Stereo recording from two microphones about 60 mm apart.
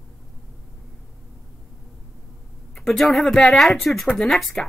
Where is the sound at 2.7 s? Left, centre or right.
Centre.